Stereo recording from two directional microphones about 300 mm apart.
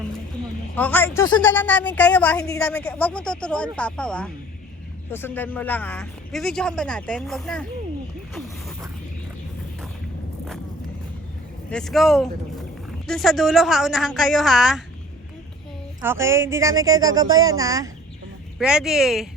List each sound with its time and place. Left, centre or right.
0.8 s a woman's voice: centre
11.7 s a woman's voice: centre
16.0 s a woman's voice: centre